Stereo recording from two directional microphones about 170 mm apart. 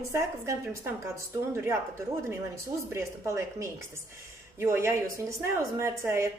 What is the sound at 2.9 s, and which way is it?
A woman's voice, 15° right (ahead or behind).